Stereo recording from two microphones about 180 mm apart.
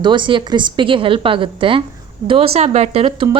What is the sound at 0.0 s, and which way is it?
A woman's voice, 25° right (ahead or behind).